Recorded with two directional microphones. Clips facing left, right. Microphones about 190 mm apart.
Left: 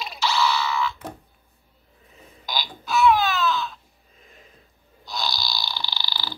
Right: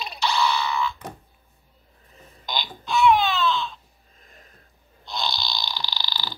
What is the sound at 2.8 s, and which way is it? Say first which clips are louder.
Baby cry: even; 5° left (ahead or behind).